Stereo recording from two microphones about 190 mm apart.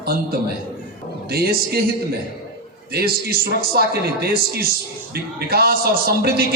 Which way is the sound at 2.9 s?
55° right (ahead or behind).